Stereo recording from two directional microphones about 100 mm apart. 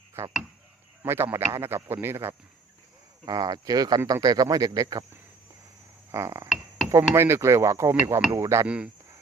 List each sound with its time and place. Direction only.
0.2 s speech: 25° right (ahead or behind)
3.2 s speech: 40° right (ahead or behind)
6.1 s a sound: 30° right (ahead or behind)
6.9 s speech: 25° right (ahead or behind)
8.6 s speech: 10° right (ahead or behind)